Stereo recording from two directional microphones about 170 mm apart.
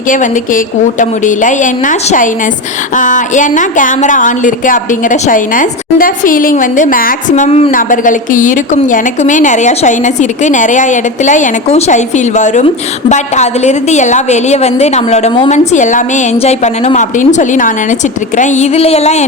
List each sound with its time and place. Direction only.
0.1 s a woman's voice: 50° left (ahead or behind)
7.7 s a woman's voice: 50° left (ahead or behind)
18.3 s a sound: 45° left (ahead or behind)